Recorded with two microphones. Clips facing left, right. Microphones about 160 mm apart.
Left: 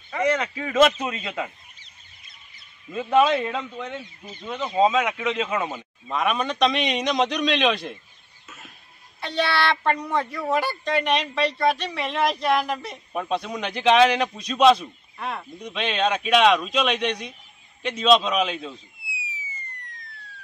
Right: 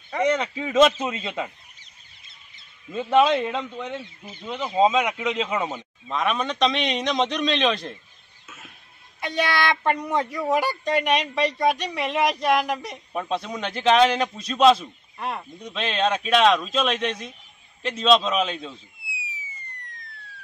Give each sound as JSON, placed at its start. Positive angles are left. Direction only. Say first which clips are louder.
{"t": 0.3, "sound": "a man's voice", "louder": "right 1 dB", "side_deg": 0}
{"t": 2.9, "sound": "a man's voice", "louder": "even", "side_deg": 5}
{"t": 5.2, "sound": "speech", "louder": "even", "side_deg": -15}
{"t": 5.7, "sound": "a man's voice", "louder": "even", "side_deg": 5}
{"t": 8.5, "sound": "chicken", "louder": "even", "side_deg": 0}
{"t": 9.2, "sound": "speech", "louder": "even", "side_deg": -15}
{"t": 12.9, "sound": "a man's voice", "louder": "left 1 dB", "side_deg": 0}
{"t": 19.4, "sound": "siren", "louder": "left 2 dB", "side_deg": 0}